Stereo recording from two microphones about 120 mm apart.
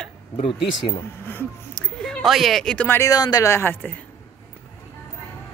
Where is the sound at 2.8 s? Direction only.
25° left (ahead or behind).